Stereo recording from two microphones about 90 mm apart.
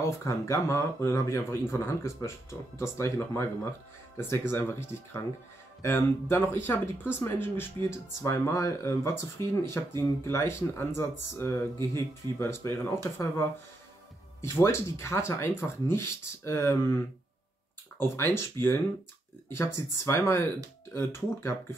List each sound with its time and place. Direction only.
0.0 s speech: 35° left (ahead or behind)